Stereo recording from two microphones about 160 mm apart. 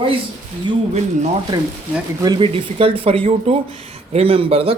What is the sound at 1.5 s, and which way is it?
Speech, 30° right (ahead or behind).